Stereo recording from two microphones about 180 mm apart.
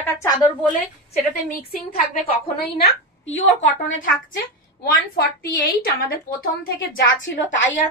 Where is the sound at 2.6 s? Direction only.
65° left (ahead or behind).